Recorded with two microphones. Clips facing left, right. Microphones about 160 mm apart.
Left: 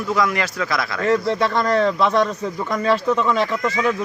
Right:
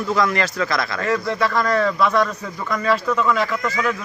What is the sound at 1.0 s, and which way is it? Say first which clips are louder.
Speech: left 4 dB; 30° left (ahead or behind).